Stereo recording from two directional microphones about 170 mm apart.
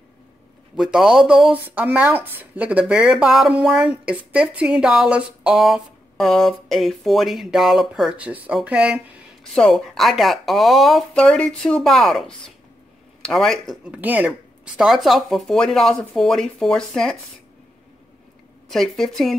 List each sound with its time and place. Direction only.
0.9 s speech: 5° right (ahead or behind)
18.7 s speech: centre (ahead or behind)